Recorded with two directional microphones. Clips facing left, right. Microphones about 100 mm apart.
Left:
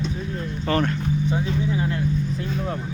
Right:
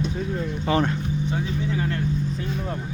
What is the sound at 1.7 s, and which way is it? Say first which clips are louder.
Speech: left 1 dB; 15° left (ahead or behind).